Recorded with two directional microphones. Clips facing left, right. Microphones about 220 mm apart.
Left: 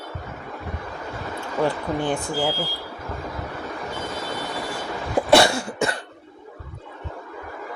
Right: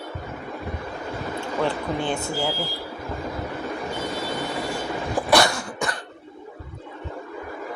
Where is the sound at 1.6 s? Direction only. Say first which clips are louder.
Left 3 dB; 15° left (ahead or behind).